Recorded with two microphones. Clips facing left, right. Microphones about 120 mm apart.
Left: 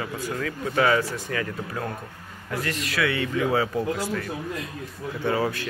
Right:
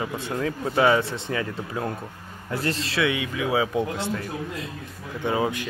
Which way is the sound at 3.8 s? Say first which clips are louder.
Even; 25° right (ahead or behind).